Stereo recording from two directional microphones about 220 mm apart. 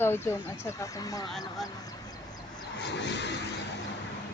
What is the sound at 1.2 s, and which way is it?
Speech, centre (ahead or behind).